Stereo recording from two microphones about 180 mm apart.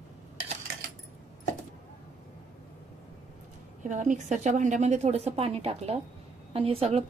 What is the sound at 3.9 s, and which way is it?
A woman's voice, 45° right (ahead or behind).